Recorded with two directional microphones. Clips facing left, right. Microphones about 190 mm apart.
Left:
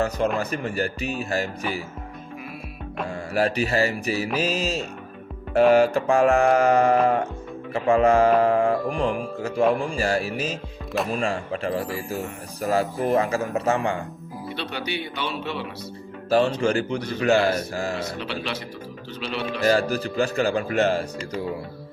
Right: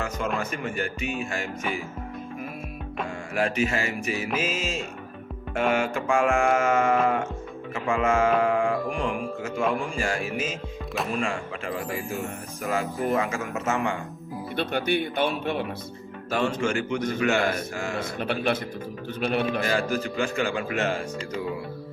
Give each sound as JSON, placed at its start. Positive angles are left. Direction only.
{"t": 0.3, "sound": "mantra", "side_deg": 35}
{"t": 3.3, "sound": "mantra", "side_deg": 35}
{"t": 7.7, "sound": "speech", "side_deg": 35}
{"t": 9.9, "sound": "mantra", "side_deg": 35}
{"t": 14.5, "sound": "speech", "side_deg": -50}
{"t": 16.6, "sound": "mantra", "side_deg": 35}
{"t": 17.9, "sound": "speech", "side_deg": -55}
{"t": 19.6, "sound": "mantra", "side_deg": 35}